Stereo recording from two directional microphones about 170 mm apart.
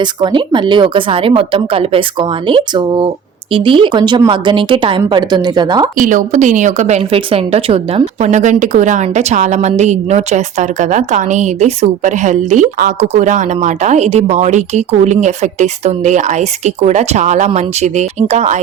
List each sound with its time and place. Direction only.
0.0 s a woman's voice: 25° right (ahead or behind)
6.0 s a woman's voice: 50° right (ahead or behind)